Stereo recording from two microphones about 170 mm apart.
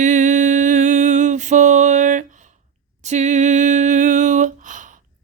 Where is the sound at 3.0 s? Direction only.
45° right (ahead or behind).